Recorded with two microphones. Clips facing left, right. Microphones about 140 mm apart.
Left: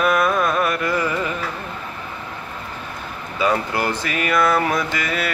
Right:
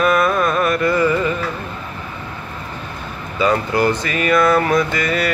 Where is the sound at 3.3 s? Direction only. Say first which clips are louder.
Right 4 dB; 10° left (ahead or behind).